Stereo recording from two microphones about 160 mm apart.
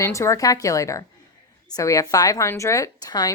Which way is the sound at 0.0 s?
20° left (ahead or behind).